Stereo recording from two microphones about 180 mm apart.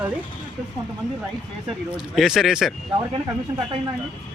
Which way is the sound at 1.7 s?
Centre (ahead or behind).